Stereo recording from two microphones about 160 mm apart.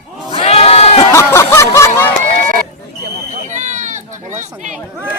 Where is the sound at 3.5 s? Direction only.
50° right (ahead or behind).